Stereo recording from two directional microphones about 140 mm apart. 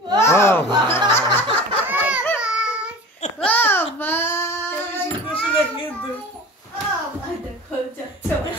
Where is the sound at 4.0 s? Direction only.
15° left (ahead or behind).